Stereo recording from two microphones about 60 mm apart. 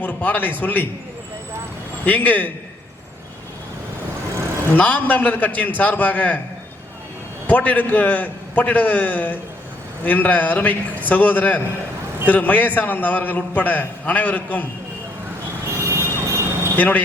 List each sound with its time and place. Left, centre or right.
0.0 s a man's voice: left
2.0 s a man's voice: left
4.7 s a man's voice: left
7.4 s a man's voice: left
15.7 s vehicle: right
16.7 s speech: left